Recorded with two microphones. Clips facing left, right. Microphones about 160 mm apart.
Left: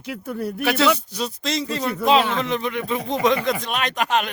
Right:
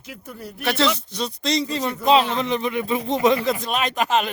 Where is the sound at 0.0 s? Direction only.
65° left (ahead or behind).